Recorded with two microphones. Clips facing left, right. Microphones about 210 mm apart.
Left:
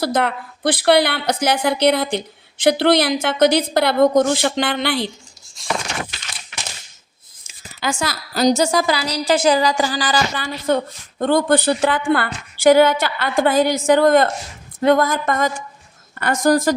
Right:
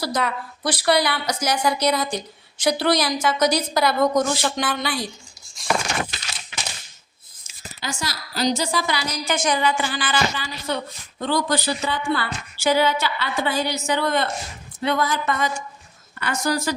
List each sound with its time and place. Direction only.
0.0 s a woman's voice: 55° left (ahead or behind)
7.8 s a woman's voice: 55° left (ahead or behind)
10.4 s a woman's voice: 50° left (ahead or behind); by 12.0 s 90° left
12.0 s a woman's voice: 55° left (ahead or behind)